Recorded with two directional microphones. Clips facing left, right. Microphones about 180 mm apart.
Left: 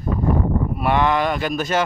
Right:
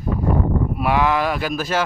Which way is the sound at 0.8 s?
5° right (ahead or behind).